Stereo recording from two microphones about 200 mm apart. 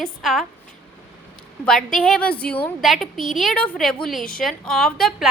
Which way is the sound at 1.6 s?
5° left (ahead or behind).